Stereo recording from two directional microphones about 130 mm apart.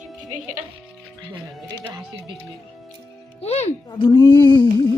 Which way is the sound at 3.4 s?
50° left (ahead or behind).